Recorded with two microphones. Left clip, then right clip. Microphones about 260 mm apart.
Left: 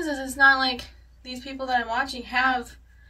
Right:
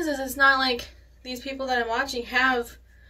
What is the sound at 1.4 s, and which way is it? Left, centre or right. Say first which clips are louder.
Speech: even; left.